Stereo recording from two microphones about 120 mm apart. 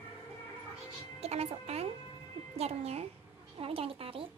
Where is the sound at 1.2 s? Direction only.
60° right (ahead or behind).